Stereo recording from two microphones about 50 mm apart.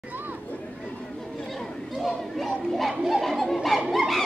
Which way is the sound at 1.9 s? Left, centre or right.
Centre.